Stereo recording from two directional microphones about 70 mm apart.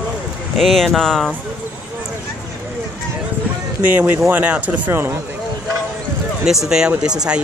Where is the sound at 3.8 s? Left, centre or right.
Right.